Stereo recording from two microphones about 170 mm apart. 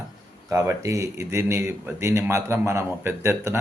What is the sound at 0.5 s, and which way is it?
A man's voice, 20° right (ahead or behind).